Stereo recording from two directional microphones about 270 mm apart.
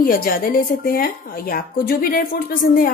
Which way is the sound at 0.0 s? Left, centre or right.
Left.